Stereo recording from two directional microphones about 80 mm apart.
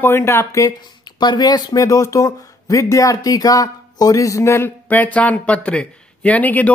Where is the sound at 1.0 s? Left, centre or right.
Left.